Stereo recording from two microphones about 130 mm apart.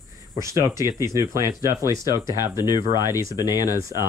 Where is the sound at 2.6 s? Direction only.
30° left (ahead or behind).